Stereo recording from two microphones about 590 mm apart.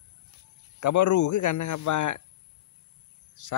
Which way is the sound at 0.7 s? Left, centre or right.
Left.